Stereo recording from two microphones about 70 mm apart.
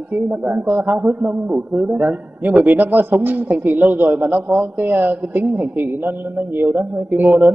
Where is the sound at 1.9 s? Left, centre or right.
Right.